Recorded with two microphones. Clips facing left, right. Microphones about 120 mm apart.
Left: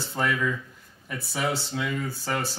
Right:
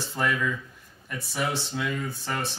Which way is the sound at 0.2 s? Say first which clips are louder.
Left 1 dB; centre (ahead or behind).